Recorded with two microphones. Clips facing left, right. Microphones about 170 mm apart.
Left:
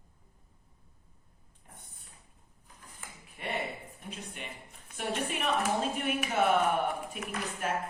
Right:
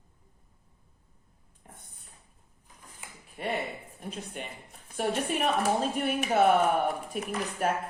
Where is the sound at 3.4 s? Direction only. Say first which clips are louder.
Right 5 dB; 40° right (ahead or behind).